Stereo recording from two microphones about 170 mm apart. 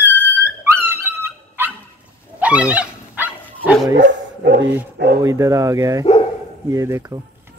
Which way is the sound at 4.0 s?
85° right.